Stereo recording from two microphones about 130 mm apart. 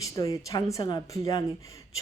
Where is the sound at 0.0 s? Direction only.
25° left (ahead or behind).